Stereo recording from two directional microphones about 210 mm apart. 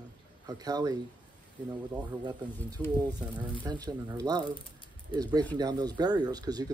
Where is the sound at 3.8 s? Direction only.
20° right (ahead or behind).